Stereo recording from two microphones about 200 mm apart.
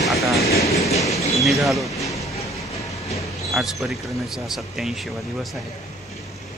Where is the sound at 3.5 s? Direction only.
Centre (ahead or behind).